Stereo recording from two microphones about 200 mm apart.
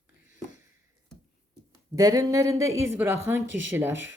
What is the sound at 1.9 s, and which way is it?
A woman's voice, 20° right (ahead or behind).